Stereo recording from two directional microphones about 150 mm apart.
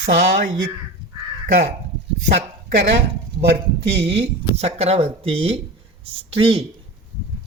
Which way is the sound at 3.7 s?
40° right (ahead or behind).